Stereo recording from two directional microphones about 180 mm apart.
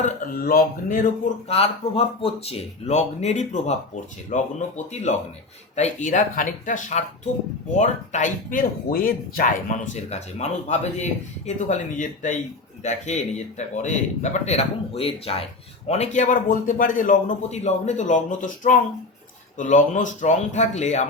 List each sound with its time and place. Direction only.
0.0 s speech: 55° left (ahead or behind)
1.5 s speech: 35° left (ahead or behind)